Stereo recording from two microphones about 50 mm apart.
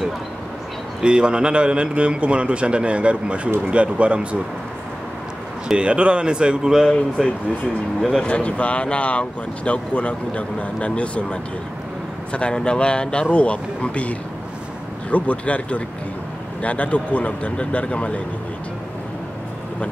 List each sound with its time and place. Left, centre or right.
1.0 s a man's voice: centre
5.7 s a man's voice: right
7.2 s speech: centre
8.2 s speech: left